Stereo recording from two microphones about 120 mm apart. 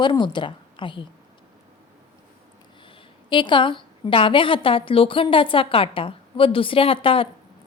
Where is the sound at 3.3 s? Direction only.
40° left (ahead or behind).